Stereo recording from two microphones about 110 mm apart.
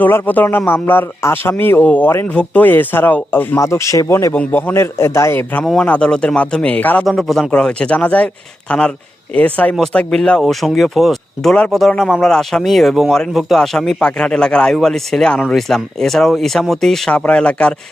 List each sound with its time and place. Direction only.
0.0 s a man's voice: 15° left (ahead or behind)
5.6 s speech: 5° left (ahead or behind)
7.0 s speech: centre (ahead or behind)
9.3 s speech: 15° left (ahead or behind)